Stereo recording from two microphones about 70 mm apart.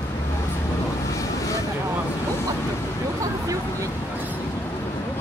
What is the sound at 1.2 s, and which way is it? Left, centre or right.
Vehicle, left.